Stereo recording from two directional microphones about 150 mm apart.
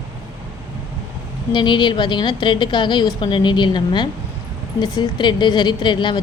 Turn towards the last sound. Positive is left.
turn(degrees=30)  # may be behind; listen again after turning